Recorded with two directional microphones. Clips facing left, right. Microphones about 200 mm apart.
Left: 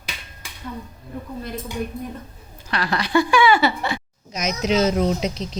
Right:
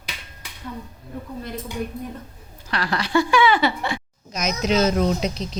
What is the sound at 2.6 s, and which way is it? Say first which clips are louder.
A woman's voice: left 1 dB; 15° left (ahead or behind).